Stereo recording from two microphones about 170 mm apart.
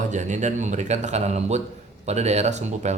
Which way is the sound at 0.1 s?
45° right (ahead or behind).